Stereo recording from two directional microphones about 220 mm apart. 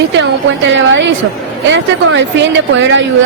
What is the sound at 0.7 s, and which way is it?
A woman's voice, 55° right (ahead or behind).